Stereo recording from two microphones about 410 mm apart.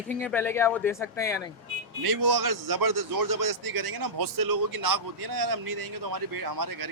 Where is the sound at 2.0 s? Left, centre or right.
Right.